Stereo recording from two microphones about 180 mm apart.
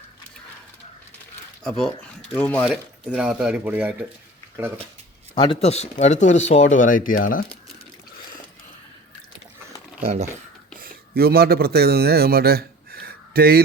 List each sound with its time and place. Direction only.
1.6 s speech: 5° left (ahead or behind)
2.6 s speech: 5° right (ahead or behind)
5.3 s speech: 30° left (ahead or behind); by 7.4 s 50° left (ahead or behind)
10.0 s speech: 35° right (ahead or behind)
10.8 s speech: 55° right (ahead or behind)